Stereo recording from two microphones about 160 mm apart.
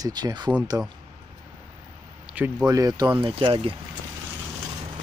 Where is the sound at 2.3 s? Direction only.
10° right (ahead or behind).